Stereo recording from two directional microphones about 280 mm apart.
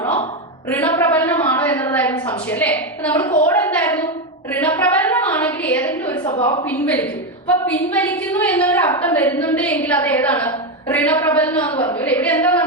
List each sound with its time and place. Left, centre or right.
0.0 s a sound: left
0.7 s a woman's voice: centre
4.5 s a sound: centre
6.3 s a woman's voice: left
6.7 s a woman's voice: centre
11.7 s a woman's voice: centre
11.9 s a woman's voice: centre